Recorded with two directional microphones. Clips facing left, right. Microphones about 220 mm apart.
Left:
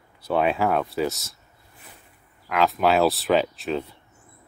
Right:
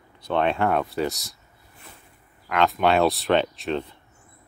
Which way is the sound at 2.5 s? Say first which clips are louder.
Even; centre (ahead or behind).